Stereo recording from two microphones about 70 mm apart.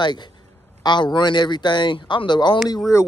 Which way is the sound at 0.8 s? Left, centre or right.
Left.